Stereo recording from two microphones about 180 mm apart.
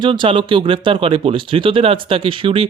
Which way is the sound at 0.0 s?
30° right (ahead or behind).